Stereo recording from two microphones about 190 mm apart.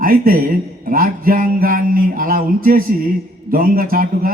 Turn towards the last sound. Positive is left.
turn(degrees=-50)  # may be behind; listen again after turning